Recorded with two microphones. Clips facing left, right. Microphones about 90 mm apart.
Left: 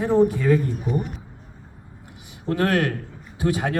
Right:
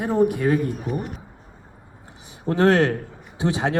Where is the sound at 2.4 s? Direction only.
25° right (ahead or behind).